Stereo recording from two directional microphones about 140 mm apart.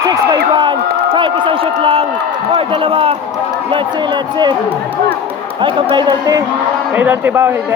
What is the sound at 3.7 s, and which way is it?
Speech, 35° right (ahead or behind).